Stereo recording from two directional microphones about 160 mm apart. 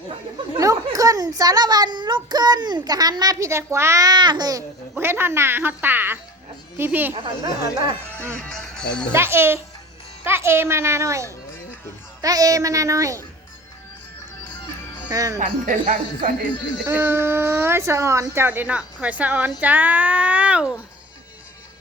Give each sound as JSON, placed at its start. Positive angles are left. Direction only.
{"t": 0.5, "sound": "a woman's voice", "side_deg": -20}
{"t": 7.4, "sound": "a woman's voice", "side_deg": -30}
{"t": 8.4, "sound": "speech", "side_deg": 5}
{"t": 9.1, "sound": "a woman's voice", "side_deg": -15}
{"t": 15.1, "sound": "a woman's voice", "side_deg": -20}
{"t": 15.4, "sound": "speech", "side_deg": -55}
{"t": 16.8, "sound": "speech", "side_deg": -15}